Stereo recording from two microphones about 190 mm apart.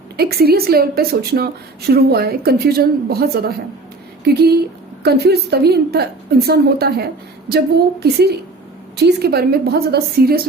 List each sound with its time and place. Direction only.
0.2 s a woman's voice: 55° right (ahead or behind)